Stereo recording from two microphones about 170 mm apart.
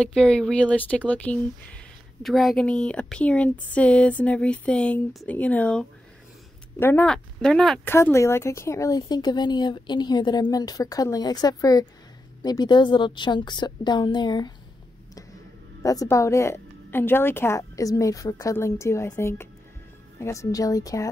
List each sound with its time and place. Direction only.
0.0 s speech: 5° left (ahead or behind)
7.9 s speech: 15° left (ahead or behind)
15.8 s speech: 20° left (ahead or behind)